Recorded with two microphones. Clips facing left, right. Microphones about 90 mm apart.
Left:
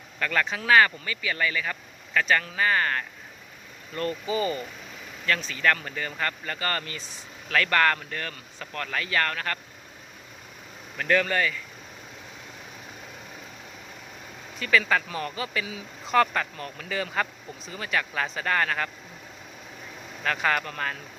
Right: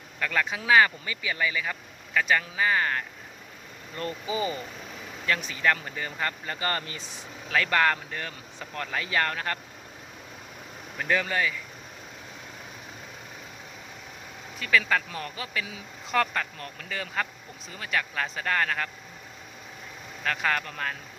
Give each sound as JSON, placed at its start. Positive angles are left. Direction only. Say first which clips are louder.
{"t": 0.2, "sound": "speech", "louder": "left 1 dB", "side_deg": -5}
{"t": 10.9, "sound": "speech", "louder": "left 3 dB", "side_deg": -10}
{"t": 14.6, "sound": "speech", "louder": "left 1 dB", "side_deg": 0}
{"t": 20.2, "sound": "speech", "louder": "left 2 dB", "side_deg": 0}